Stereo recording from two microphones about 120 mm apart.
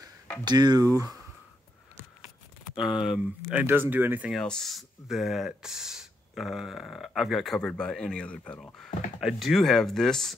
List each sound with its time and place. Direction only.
0.5 s speech: 35° right (ahead or behind)
2.7 s speech: 5° right (ahead or behind)
3.6 s speech: 15° right (ahead or behind)
4.3 s speech: 5° left (ahead or behind)